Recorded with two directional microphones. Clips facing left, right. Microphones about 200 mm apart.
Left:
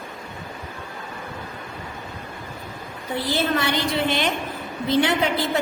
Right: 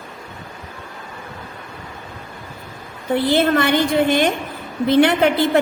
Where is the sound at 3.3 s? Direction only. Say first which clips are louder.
Right 6 dB; 55° right (ahead or behind).